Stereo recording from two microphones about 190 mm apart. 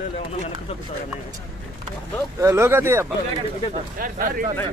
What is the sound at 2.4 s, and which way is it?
Speech, 15° right (ahead or behind).